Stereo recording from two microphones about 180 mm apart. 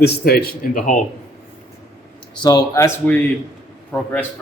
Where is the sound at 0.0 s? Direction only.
60° left (ahead or behind).